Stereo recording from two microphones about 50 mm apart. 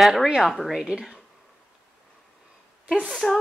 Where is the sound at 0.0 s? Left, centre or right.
Centre.